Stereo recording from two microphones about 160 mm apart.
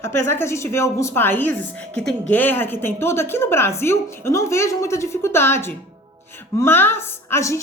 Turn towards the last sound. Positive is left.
turn(degrees=15)  # may be behind; listen again after turning